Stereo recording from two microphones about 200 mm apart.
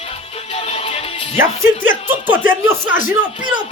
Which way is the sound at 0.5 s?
30° left (ahead or behind).